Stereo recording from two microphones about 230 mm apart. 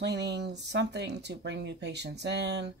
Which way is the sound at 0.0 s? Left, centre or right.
Right.